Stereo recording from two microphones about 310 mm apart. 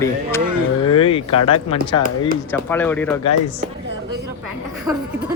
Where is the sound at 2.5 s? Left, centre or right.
Centre.